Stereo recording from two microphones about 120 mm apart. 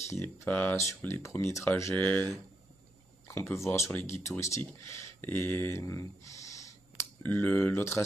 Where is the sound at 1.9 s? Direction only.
10° left (ahead or behind).